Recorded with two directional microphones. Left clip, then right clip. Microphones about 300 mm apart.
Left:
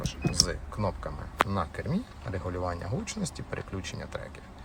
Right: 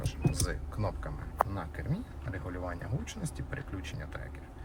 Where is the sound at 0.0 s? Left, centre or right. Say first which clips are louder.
Left 8 dB; centre.